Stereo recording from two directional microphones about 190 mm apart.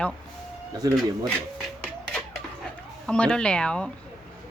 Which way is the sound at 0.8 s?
20° right (ahead or behind).